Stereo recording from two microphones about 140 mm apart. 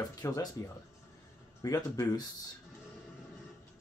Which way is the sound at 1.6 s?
25° left (ahead or behind).